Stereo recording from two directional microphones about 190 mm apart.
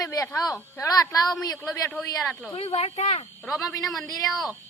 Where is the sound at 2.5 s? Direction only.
30° left (ahead or behind).